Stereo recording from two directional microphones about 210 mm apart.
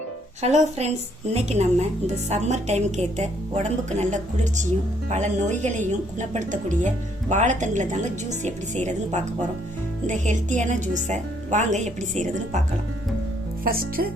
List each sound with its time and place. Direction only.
0.4 s speech: 30° right (ahead or behind)
13.7 s speech: 45° right (ahead or behind)